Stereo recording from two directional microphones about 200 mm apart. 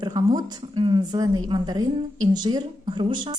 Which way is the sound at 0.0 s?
20° right (ahead or behind).